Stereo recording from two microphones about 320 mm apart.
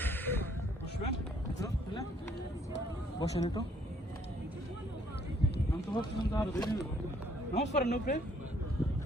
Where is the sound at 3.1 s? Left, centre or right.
Centre.